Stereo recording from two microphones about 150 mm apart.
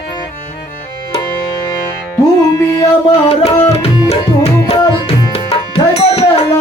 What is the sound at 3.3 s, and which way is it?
Tabla, 45° left (ahead or behind).